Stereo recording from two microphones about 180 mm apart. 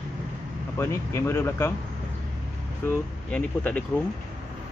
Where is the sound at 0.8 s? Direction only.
15° left (ahead or behind).